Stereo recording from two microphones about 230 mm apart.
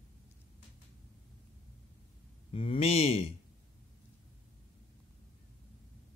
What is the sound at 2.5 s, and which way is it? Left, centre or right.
Speech, left.